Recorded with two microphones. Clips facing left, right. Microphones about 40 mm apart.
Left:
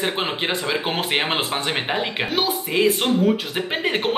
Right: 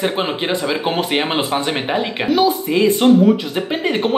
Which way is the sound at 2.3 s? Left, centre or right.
Left.